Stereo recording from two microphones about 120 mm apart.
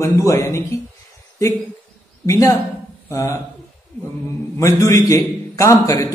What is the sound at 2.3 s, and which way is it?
A man's voice, 30° left (ahead or behind).